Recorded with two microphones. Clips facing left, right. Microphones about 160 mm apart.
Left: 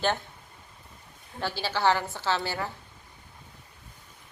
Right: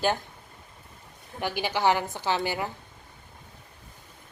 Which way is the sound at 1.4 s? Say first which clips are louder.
Right 1 dB; 15° right (ahead or behind).